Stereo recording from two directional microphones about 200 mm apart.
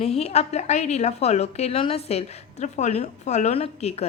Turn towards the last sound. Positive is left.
turn(degrees=30)  # may be behind; listen again after turning